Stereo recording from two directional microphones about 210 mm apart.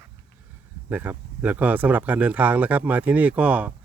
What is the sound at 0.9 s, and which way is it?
Speech, 10° right (ahead or behind).